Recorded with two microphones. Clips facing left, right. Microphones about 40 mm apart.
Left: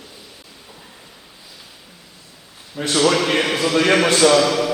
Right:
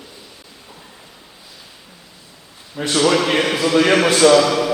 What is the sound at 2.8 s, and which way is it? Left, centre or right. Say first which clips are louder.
A man's voice: right 1 dB; centre.